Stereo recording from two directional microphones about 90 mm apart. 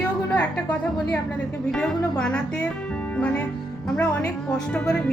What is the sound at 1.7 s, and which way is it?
Speech, 10° left (ahead or behind).